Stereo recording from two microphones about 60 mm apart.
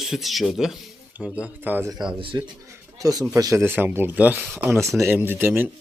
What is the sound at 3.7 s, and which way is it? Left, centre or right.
Speech, right.